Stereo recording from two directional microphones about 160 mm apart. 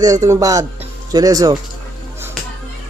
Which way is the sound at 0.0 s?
20° right (ahead or behind).